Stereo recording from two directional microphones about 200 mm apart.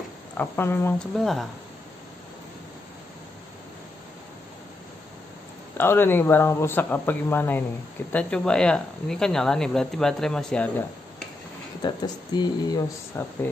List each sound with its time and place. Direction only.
0.4 s speech: 10° left (ahead or behind)
1.2 s speech: centre (ahead or behind)
5.8 s speech: 10° left (ahead or behind)
11.8 s speech: 20° left (ahead or behind)